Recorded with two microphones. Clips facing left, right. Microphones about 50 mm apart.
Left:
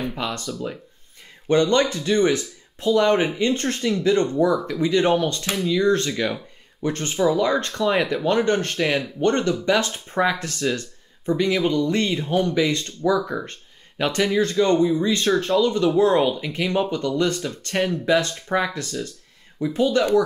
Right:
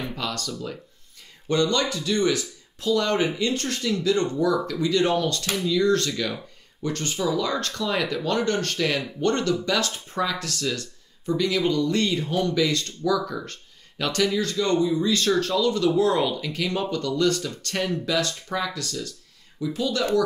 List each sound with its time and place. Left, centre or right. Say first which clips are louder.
0.1 s speech: left 2 dB; left
1.5 s speech: left 5 dB; left